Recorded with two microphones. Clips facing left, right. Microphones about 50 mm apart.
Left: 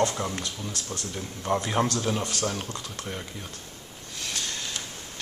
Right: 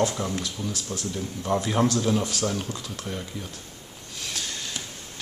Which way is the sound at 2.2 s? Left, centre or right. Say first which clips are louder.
Right 2 dB; centre.